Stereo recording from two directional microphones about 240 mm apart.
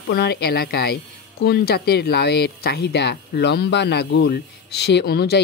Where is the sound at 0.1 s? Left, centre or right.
Left.